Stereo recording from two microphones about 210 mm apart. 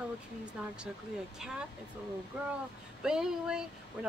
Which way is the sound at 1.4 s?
Centre (ahead or behind).